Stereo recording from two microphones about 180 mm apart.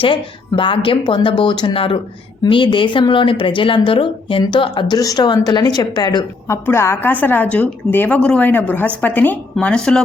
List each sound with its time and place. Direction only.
0.0 s a woman's voice: 30° left (ahead or behind); by 10.0 s 5° left (ahead or behind)